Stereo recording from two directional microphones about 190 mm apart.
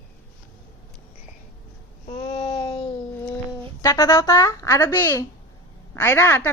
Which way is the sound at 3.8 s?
15° left (ahead or behind).